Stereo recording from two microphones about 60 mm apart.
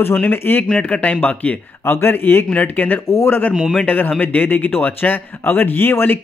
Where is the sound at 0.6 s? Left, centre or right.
Centre.